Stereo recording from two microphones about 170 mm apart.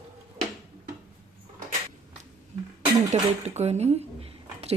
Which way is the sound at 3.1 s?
40° right (ahead or behind).